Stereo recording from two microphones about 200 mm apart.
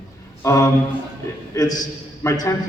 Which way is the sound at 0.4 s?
15° left (ahead or behind).